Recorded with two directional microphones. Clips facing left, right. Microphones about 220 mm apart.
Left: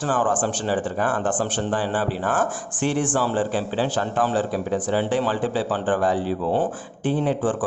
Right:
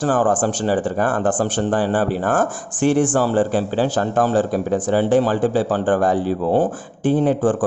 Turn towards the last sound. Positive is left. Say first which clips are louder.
# right 5 dB
turn(degrees=-45)  # may be behind; listen again after turning